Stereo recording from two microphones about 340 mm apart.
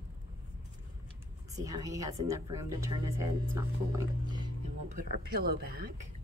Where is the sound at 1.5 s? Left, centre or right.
Centre.